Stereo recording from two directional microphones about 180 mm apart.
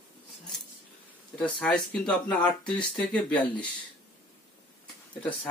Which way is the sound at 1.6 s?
5° left (ahead or behind).